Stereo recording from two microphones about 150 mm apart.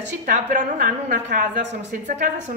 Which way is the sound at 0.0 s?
60° right (ahead or behind).